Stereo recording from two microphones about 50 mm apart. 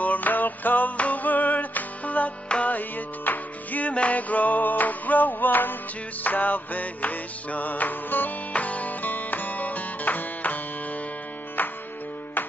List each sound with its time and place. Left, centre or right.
0.0 s music: left